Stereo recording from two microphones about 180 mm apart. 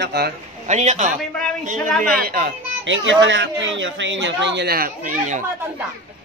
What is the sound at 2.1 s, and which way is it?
Speech, 55° right (ahead or behind).